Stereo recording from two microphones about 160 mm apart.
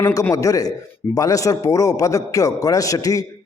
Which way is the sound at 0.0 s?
20° left (ahead or behind).